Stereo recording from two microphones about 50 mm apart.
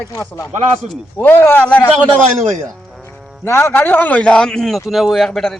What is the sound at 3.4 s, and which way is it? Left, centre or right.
Speech, left.